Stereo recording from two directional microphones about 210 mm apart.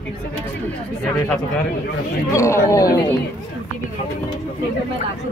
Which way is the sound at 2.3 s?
15° left (ahead or behind).